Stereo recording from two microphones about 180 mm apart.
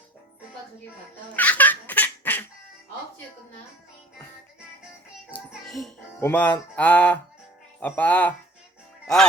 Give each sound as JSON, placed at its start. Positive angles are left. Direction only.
{"t": 1.3, "sound": "a sound", "side_deg": 10}
{"t": 5.5, "sound": "music", "side_deg": 0}
{"t": 6.1, "sound": "speech", "side_deg": 10}